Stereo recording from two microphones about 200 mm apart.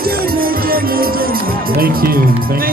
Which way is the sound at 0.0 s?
50° right (ahead or behind).